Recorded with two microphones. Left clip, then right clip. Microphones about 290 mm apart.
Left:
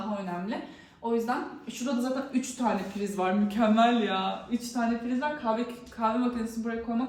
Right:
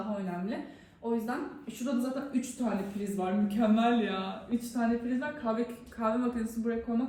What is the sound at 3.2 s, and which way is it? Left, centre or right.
A man's voice, centre.